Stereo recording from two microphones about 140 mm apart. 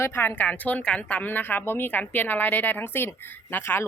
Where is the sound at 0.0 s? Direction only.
15° left (ahead or behind).